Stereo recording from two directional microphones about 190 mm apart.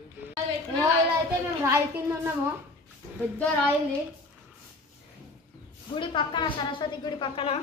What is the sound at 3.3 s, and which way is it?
Speech, 5° left (ahead or behind).